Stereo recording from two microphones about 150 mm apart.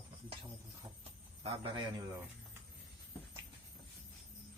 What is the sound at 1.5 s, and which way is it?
Speech, 40° right (ahead or behind).